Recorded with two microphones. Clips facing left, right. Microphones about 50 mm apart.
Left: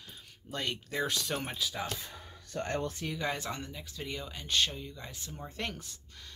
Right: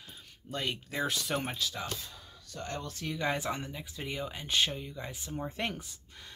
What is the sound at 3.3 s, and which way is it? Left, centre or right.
Speech, centre.